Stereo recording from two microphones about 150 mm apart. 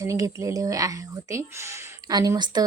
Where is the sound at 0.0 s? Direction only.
20° right (ahead or behind).